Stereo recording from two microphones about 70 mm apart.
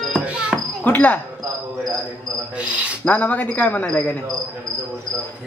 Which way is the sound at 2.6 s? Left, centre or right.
Centre.